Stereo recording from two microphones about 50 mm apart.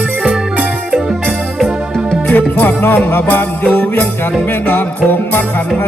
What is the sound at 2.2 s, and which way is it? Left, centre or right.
Music, left.